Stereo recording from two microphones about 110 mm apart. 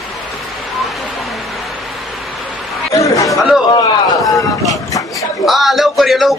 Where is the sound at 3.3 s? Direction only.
Centre (ahead or behind).